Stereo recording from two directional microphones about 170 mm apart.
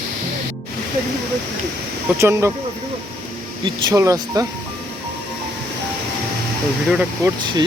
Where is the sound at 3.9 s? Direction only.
20° right (ahead or behind).